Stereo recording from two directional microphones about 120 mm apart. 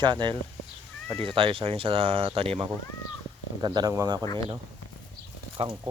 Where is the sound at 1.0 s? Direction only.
5° left (ahead or behind).